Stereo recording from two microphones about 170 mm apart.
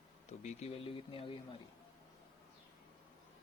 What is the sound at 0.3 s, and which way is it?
Speech, 40° left (ahead or behind).